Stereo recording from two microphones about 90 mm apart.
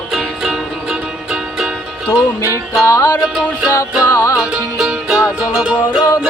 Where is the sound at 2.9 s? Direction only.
40° left (ahead or behind).